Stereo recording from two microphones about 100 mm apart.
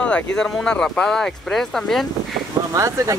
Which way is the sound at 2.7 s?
30° right (ahead or behind).